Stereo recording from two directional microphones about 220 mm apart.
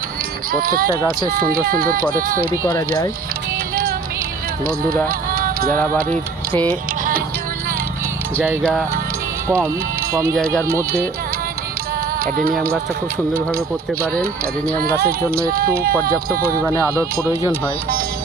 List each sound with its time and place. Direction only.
0.6 s speech: 40° right (ahead or behind)
2.6 s speech: 15° left (ahead or behind)
4.6 s speech: 40° right (ahead or behind)
5.0 s music: 40° right (ahead or behind)
5.7 s speech: 10° left (ahead or behind)
10.1 s speech: 15° right (ahead or behind)
12.2 s speech: 40° right (ahead or behind)
15.0 s speech: 40° right (ahead or behind)
16.8 s speech: 15° right (ahead or behind)